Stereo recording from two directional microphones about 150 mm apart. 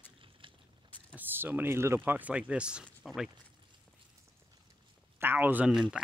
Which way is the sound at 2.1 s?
10° right (ahead or behind).